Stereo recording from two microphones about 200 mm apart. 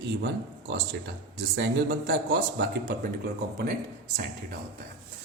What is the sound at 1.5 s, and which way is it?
Speech, 65° right (ahead or behind).